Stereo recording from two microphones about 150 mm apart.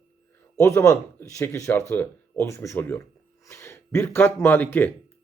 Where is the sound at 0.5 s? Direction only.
20° left (ahead or behind).